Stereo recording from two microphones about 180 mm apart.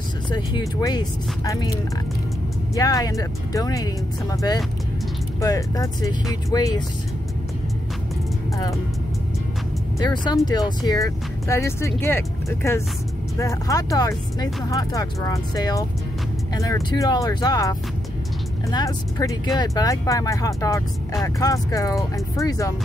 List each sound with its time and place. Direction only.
0.3 s speech: 25° left (ahead or behind)
2.7 s speech: 20° left (ahead or behind)
10.2 s speech: 20° left (ahead or behind)